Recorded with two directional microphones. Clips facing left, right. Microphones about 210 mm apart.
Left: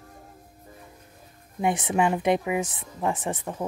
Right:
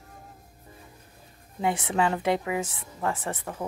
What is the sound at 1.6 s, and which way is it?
A woman's voice, 15° left (ahead or behind).